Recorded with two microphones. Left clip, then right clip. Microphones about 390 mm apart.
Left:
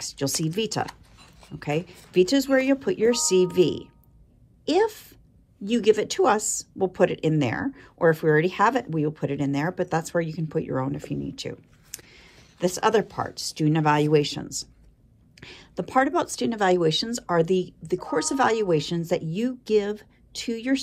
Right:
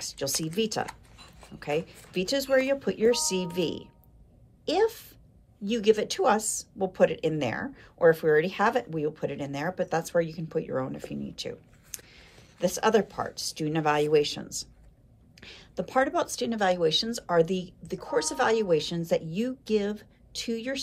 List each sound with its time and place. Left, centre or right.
0.0 s a woman's voice: centre